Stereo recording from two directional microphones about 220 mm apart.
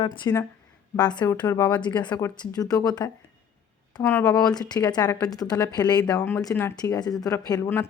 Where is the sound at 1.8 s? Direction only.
20° left (ahead or behind).